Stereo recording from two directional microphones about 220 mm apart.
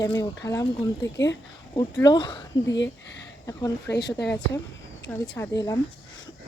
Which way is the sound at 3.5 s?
15° left (ahead or behind).